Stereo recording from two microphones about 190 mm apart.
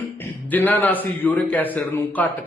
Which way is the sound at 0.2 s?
10° left (ahead or behind).